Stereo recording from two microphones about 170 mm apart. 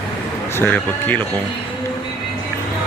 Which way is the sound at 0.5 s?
10° left (ahead or behind).